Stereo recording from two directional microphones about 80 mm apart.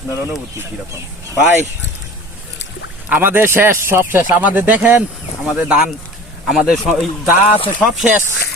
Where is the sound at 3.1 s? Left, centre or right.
Right.